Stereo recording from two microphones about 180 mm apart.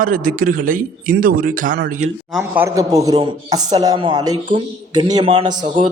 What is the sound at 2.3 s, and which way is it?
Speech, 5° right (ahead or behind).